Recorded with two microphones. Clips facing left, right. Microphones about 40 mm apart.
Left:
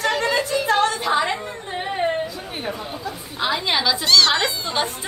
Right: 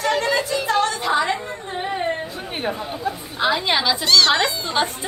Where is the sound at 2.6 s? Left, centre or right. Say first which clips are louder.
Right 4 dB; right.